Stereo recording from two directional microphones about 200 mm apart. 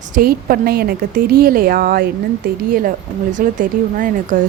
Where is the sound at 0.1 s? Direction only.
45° right (ahead or behind).